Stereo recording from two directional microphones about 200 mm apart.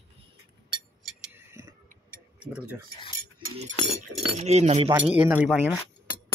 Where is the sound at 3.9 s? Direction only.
30° right (ahead or behind).